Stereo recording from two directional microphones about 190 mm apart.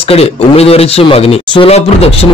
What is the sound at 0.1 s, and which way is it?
A man's voice, 30° left (ahead or behind).